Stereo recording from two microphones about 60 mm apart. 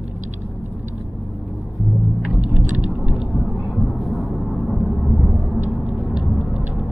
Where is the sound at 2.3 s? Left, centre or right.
Right.